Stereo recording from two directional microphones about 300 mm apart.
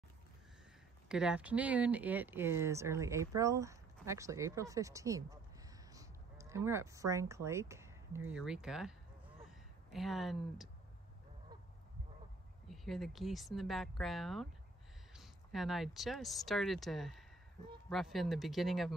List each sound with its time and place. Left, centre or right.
1.0 s speech: centre
12.6 s speech: centre